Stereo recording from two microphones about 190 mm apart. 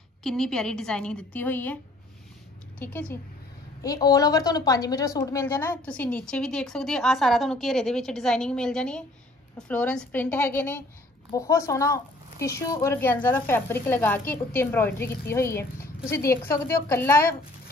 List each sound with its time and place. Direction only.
0.2 s a woman's voice: 5° left (ahead or behind)
2.8 s a woman's voice: 10° left (ahead or behind)